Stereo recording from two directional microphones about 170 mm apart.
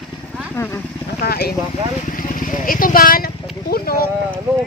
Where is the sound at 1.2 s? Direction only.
65° left (ahead or behind).